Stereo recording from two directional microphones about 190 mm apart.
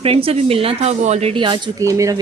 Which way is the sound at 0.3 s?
30° right (ahead or behind).